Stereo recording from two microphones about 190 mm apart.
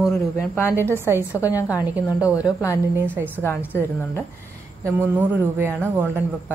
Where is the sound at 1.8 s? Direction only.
10° right (ahead or behind).